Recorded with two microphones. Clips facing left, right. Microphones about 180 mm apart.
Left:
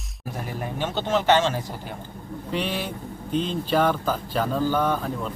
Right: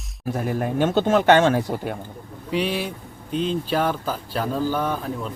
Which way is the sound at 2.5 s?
10° right (ahead or behind).